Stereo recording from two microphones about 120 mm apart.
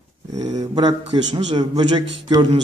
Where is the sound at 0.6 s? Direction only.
35° right (ahead or behind).